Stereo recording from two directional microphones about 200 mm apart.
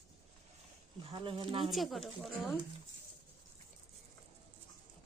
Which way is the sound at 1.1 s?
25° right (ahead or behind).